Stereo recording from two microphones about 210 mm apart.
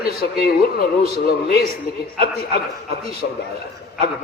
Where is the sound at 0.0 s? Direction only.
45° left (ahead or behind).